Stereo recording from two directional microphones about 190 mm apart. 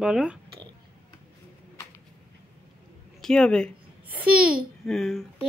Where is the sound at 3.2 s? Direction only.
5° left (ahead or behind).